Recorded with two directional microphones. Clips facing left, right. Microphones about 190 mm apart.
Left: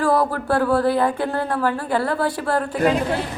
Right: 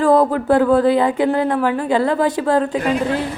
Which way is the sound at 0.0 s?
20° right (ahead or behind).